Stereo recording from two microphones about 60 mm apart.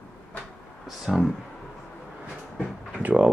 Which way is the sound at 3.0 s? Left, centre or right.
Right.